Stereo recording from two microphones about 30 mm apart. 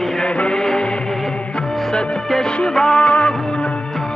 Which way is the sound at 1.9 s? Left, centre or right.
Left.